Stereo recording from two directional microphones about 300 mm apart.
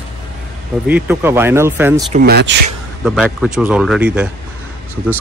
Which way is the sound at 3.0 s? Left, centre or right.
Centre.